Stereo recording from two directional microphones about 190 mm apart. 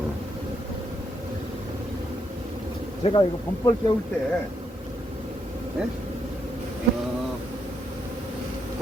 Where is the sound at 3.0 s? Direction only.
30° left (ahead or behind).